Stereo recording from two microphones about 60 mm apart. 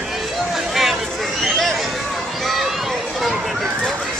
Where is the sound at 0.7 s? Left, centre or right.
Centre.